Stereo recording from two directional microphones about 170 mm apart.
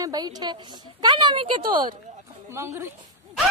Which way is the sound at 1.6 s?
55° right (ahead or behind).